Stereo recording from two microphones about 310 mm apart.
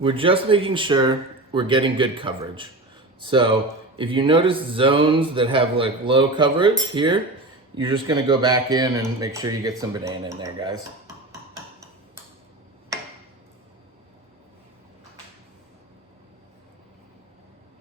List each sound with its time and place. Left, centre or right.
0.0 s speech: centre